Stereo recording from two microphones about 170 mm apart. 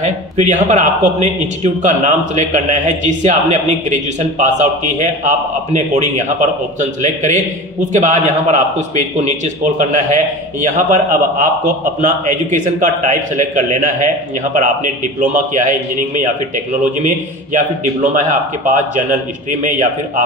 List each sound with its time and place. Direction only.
0.0 s a man's voice: 45° right (ahead or behind)